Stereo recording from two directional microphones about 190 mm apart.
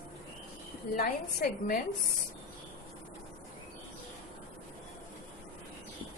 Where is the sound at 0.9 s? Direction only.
50° left (ahead or behind).